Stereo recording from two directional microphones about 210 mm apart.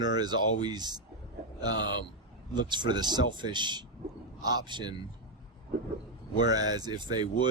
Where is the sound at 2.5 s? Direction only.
20° right (ahead or behind).